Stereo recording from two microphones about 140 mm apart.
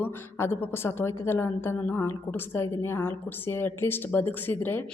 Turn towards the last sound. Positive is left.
turn(degrees=15)  # may be behind; listen again after turning